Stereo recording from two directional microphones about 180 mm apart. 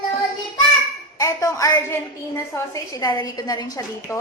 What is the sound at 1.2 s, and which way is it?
A woman's voice, 20° left (ahead or behind).